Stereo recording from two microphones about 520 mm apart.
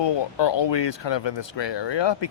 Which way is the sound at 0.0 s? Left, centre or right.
Left.